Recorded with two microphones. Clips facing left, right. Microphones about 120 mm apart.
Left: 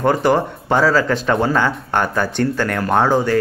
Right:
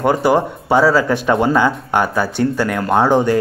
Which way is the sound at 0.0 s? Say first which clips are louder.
Right 1 dB; 10° right (ahead or behind).